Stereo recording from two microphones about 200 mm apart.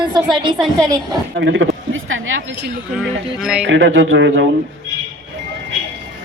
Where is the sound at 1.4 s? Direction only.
65° right (ahead or behind).